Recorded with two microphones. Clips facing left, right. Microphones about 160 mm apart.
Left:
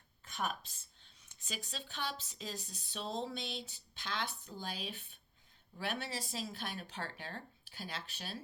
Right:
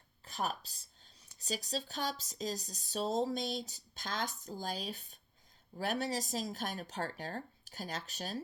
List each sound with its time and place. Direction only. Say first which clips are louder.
0.3 s speech: right 2 dB; 35° right (ahead or behind)